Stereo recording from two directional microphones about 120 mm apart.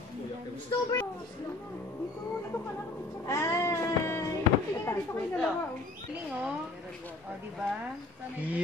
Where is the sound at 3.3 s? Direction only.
25° left (ahead or behind).